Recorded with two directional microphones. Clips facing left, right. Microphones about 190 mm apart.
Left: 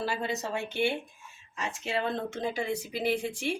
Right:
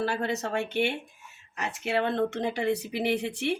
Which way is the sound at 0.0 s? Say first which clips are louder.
Right 3 dB; 65° right (ahead or behind).